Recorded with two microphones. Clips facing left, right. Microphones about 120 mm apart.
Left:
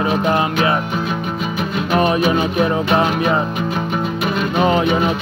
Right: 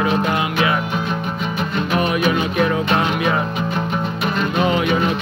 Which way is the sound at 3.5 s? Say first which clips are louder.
Left 1 dB; 5° left (ahead or behind).